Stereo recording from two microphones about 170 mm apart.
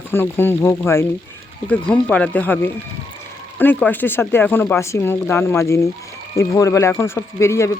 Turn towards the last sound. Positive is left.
turn(degrees=15)  # may be behind; listen again after turning